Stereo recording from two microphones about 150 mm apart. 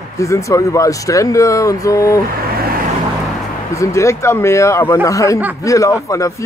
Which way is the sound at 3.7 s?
20° left (ahead or behind).